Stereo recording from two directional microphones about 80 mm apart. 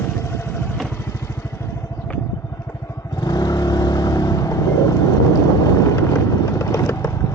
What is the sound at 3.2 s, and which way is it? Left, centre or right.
Vehicle, left.